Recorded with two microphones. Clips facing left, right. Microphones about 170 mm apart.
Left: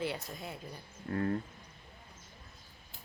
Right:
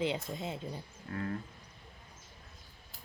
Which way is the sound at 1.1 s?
35° left (ahead or behind).